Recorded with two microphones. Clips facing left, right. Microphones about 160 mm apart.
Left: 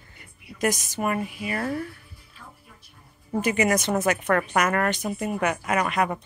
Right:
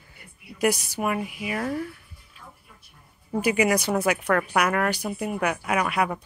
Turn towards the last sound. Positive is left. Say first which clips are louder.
# even
turn(degrees=-5)  # may be behind; listen again after turning